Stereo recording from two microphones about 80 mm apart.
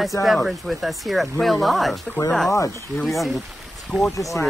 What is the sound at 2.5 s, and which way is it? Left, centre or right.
Speech, left.